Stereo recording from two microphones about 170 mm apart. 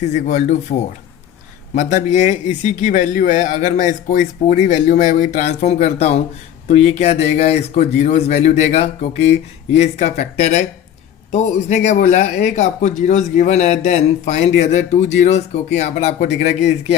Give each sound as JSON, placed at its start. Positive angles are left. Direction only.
{"t": 0.1, "sound": "speech", "side_deg": 45}